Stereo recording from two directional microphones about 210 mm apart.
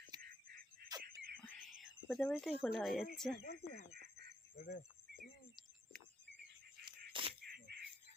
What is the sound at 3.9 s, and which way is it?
Goose, 50° right (ahead or behind).